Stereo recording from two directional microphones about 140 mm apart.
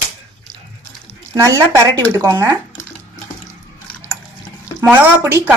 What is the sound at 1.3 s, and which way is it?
A woman's voice, 25° right (ahead or behind).